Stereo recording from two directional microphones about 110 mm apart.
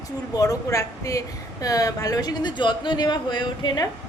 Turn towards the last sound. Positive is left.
turn(degrees=45)  # may be behind; listen again after turning